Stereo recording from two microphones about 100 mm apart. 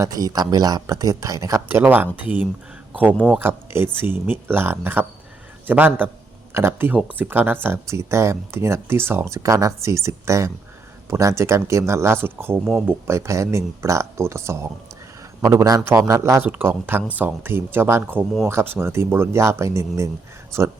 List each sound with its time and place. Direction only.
0.0 s speech: 40° right (ahead or behind)
1.6 s speech: 20° right (ahead or behind)
16.5 s speech: 20° right (ahead or behind)